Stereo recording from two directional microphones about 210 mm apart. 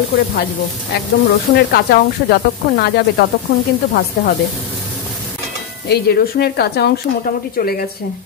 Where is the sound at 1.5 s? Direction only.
50° left (ahead or behind).